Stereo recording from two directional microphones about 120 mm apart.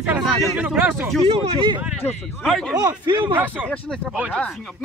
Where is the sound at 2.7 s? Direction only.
35° right (ahead or behind).